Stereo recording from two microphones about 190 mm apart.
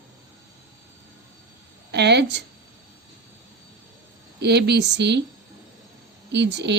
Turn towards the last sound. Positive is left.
turn(degrees=-65)  # may be behind; listen again after turning